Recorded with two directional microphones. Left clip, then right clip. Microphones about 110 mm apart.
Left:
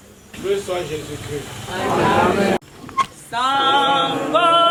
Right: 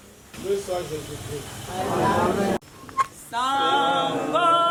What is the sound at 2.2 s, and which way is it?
Speech, 20° left (ahead or behind).